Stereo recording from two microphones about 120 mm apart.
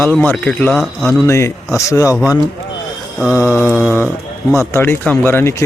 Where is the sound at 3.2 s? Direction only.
10° right (ahead or behind).